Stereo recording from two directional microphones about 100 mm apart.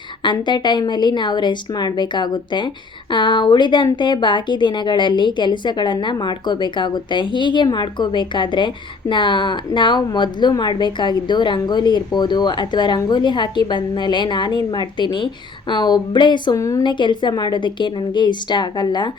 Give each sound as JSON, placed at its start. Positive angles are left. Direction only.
{"t": 0.2, "sound": "a woman's voice", "side_deg": 50}
{"t": 16.6, "sound": "a woman's voice", "side_deg": 30}
{"t": 16.8, "sound": "a woman's voice", "side_deg": 50}